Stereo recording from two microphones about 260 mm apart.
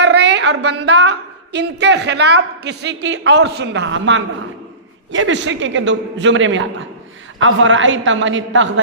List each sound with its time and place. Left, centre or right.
0.0 s a sound: right
0.6 s a woman's voice: right
0.9 s a woman's voice: right